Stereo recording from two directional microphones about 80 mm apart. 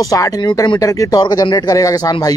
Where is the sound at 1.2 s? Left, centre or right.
Left.